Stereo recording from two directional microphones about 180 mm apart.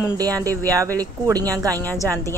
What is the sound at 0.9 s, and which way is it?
Speech, 20° right (ahead or behind).